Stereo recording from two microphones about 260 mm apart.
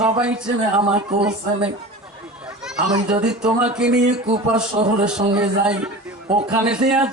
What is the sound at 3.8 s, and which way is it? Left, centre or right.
Singing, centre.